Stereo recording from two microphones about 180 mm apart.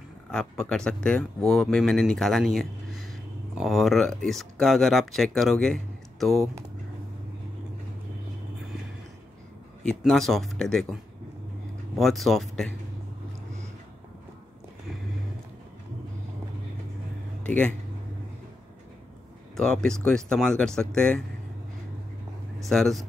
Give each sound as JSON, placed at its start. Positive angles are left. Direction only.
{"t": 0.3, "sound": "speech", "side_deg": 5}
{"t": 9.8, "sound": "speech", "side_deg": 0}
{"t": 12.0, "sound": "speech", "side_deg": 0}
{"t": 17.4, "sound": "speech", "side_deg": 5}
{"t": 19.5, "sound": "speech", "side_deg": 5}
{"t": 22.6, "sound": "speech", "side_deg": 0}